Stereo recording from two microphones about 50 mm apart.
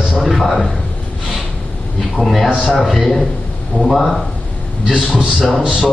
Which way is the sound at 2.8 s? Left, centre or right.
Centre.